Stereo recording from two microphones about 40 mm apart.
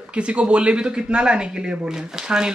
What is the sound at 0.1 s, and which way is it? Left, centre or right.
Speech, right.